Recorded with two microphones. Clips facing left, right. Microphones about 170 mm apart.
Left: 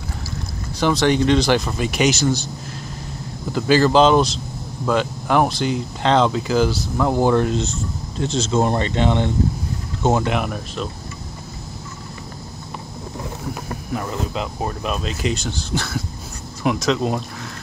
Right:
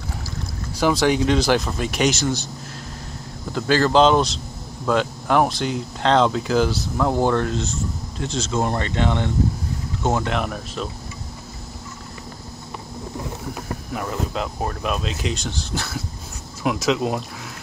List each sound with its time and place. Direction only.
0.7 s speech: 5° right (ahead or behind)
3.5 s speech: 5° left (ahead or behind)
13.9 s speech: centre (ahead or behind)